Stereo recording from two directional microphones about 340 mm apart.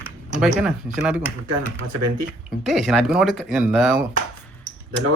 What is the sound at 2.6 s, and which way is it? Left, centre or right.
Speech, centre.